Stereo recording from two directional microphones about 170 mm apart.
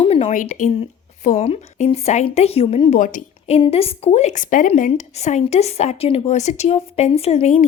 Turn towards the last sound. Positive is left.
turn(degrees=40)  # may be behind; listen again after turning